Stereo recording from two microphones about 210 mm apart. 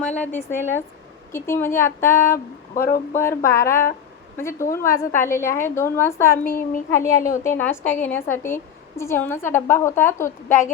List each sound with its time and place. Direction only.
0.2 s a woman's voice: 10° left (ahead or behind)
2.7 s speech: 45° left (ahead or behind)
3.2 s a woman's voice: 15° left (ahead or behind)
6.4 s a child's voice: 40° left (ahead or behind)
6.9 s a woman's voice: 15° left (ahead or behind)